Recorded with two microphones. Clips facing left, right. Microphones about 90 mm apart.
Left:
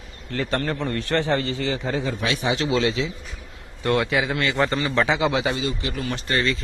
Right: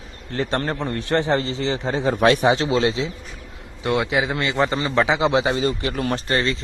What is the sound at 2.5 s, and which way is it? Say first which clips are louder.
Speech: right 2 dB; 35° right (ahead or behind).